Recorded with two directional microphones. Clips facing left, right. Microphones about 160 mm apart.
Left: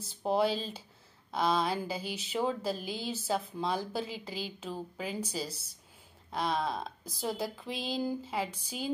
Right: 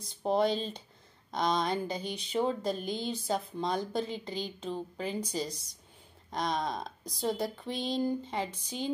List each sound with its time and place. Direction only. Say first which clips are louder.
0.0 s speech: right 1 dB; 5° left (ahead or behind)